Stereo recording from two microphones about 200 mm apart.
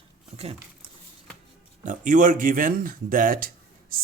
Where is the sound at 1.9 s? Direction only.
40° right (ahead or behind).